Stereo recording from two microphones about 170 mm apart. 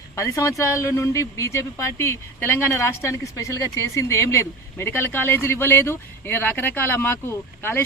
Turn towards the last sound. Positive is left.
turn(degrees=15)  # may be behind; listen again after turning